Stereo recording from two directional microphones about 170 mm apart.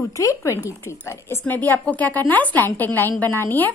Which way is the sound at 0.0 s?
20° left (ahead or behind).